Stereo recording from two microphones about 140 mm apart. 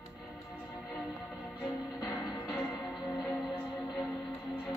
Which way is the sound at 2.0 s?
30° left (ahead or behind).